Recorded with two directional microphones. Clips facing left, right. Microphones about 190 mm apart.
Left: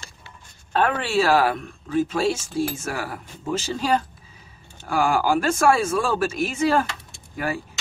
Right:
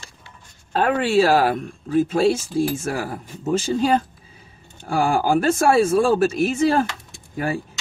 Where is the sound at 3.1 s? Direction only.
35° right (ahead or behind).